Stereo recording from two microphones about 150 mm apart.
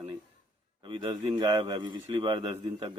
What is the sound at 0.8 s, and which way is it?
A man's voice, 30° right (ahead or behind).